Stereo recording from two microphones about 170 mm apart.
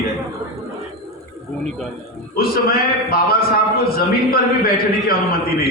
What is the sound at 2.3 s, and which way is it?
A man's voice, 60° left (ahead or behind).